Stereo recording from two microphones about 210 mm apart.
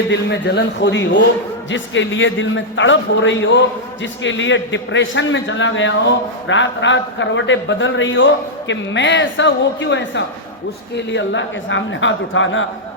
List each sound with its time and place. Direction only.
0.1 s a man's voice: 55° left (ahead or behind)